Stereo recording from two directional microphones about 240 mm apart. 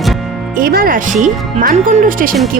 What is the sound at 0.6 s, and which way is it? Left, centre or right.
Music, right.